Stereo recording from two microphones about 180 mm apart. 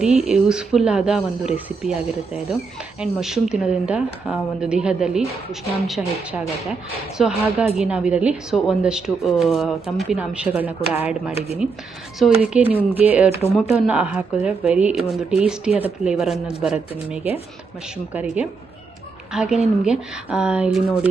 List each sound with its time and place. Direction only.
0.0 s a woman's voice: 5° right (ahead or behind)
3.0 s a woman's voice: 5° right (ahead or behind)
11.3 s speech: 35° left (ahead or behind)
12.2 s a woman's voice: 5° right (ahead or behind)